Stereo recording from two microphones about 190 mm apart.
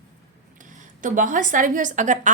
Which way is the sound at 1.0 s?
45° right (ahead or behind).